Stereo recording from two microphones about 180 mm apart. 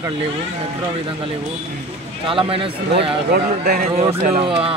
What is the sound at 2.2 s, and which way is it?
Speech, 30° right (ahead or behind).